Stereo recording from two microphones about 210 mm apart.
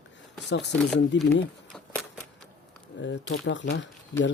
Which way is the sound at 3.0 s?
60° left (ahead or behind).